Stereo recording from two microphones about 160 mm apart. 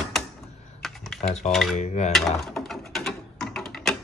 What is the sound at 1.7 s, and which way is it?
Speech, 45° left (ahead or behind).